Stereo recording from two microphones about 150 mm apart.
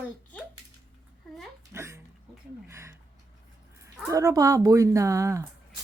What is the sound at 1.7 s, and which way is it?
Speech, 20° right (ahead or behind).